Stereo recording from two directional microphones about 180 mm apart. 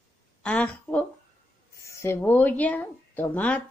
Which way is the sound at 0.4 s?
10° left (ahead or behind).